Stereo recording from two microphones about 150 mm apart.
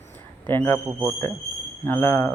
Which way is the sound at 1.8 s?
15° left (ahead or behind).